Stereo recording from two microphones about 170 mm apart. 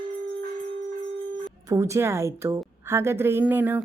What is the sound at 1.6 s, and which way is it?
A woman's voice, 15° right (ahead or behind).